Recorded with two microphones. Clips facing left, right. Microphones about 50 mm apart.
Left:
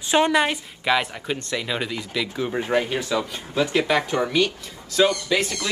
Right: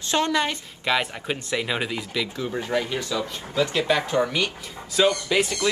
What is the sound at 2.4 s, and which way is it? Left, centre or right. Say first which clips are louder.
Speech: left 5 dB; left.